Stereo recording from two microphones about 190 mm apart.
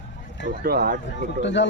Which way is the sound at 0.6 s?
55° right (ahead or behind).